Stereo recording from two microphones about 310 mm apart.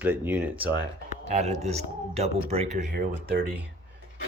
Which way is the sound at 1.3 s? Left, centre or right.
Right.